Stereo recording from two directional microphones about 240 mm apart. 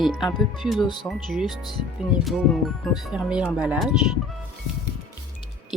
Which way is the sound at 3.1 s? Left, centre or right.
Centre.